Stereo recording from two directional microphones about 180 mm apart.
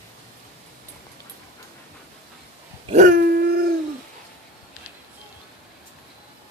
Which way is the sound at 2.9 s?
50° right (ahead or behind).